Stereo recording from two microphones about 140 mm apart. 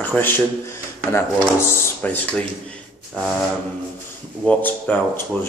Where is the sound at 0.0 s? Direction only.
15° left (ahead or behind).